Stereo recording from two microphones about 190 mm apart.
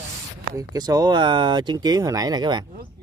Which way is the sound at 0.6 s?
20° right (ahead or behind).